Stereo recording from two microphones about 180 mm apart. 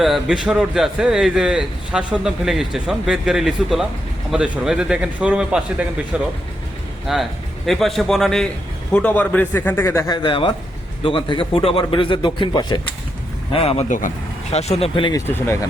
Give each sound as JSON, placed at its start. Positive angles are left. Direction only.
{"t": 0.0, "sound": "a man's voice", "side_deg": 0}
{"t": 13.5, "sound": "speech", "side_deg": 35}